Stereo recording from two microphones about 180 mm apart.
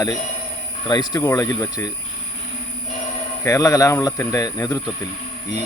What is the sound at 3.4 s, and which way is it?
Speech, 15° left (ahead or behind).